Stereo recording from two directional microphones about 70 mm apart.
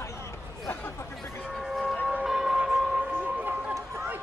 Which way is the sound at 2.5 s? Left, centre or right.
Centre.